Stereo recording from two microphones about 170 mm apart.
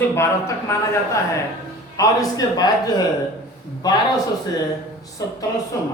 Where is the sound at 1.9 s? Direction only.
20° left (ahead or behind).